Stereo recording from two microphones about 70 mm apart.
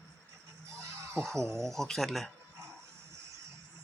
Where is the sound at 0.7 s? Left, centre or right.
Right.